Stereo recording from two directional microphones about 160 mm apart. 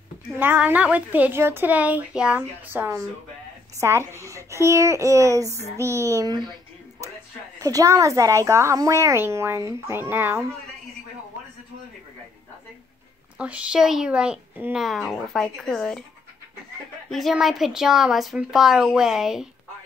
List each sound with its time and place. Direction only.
0.3 s a woman's voice: 10° right (ahead or behind)
7.5 s a woman's voice: 20° right (ahead or behind)
13.4 s a woman's voice: 5° right (ahead or behind)
17.1 s a woman's voice: centre (ahead or behind)